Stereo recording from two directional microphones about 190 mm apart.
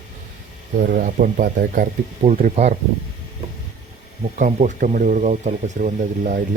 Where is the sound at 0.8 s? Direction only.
50° right (ahead or behind).